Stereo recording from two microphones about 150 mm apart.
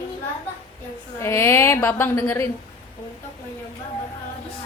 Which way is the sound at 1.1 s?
15° left (ahead or behind).